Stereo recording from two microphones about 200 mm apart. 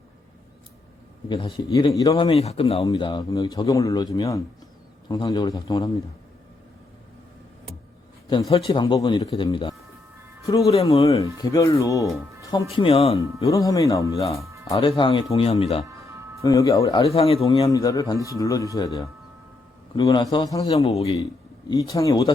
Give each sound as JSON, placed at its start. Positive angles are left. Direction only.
{"t": 1.3, "sound": "speech", "side_deg": 20}
{"t": 8.3, "sound": "speech", "side_deg": 25}
{"t": 11.4, "sound": "speech", "side_deg": 15}
{"t": 13.4, "sound": "speech", "side_deg": 15}
{"t": 16.0, "sound": "music", "side_deg": -15}
{"t": 16.4, "sound": "speech", "side_deg": 15}
{"t": 17.1, "sound": "speech", "side_deg": 30}
{"t": 17.7, "sound": "speech", "side_deg": 15}
{"t": 20.7, "sound": "a man's voice", "side_deg": 30}
{"t": 21.7, "sound": "speech", "side_deg": 15}